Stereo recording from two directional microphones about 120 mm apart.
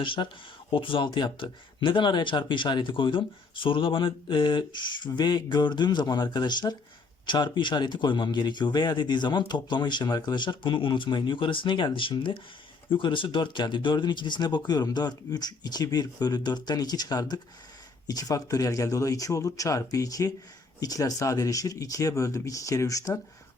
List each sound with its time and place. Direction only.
0.0 s speech: 45° left (ahead or behind); by 23.2 s 25° left (ahead or behind)